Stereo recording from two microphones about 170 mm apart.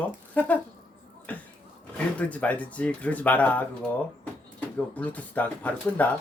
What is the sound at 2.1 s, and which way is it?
Speech, 10° left (ahead or behind).